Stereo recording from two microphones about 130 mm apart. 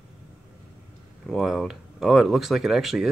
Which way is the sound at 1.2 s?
Centre (ahead or behind).